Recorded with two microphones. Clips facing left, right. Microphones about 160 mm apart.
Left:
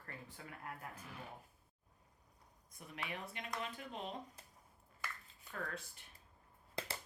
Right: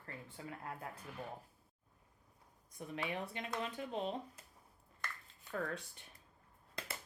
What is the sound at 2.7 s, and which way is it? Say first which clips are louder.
Speech: right 6 dB; 30° right (ahead or behind).